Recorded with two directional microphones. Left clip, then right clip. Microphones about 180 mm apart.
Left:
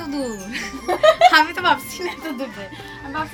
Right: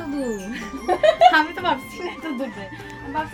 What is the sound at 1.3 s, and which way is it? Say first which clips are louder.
Speech: left 2 dB; 15° right (ahead or behind).